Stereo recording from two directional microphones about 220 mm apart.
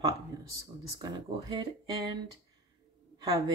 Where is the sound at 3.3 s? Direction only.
15° right (ahead or behind).